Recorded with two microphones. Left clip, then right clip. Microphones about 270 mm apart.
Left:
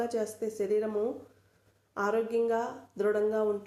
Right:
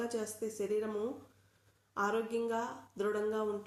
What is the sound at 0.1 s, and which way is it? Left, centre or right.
Speech, centre.